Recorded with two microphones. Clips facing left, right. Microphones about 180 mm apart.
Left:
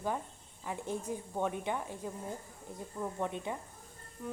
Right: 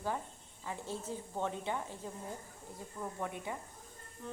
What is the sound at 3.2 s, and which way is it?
Speech, 20° left (ahead or behind).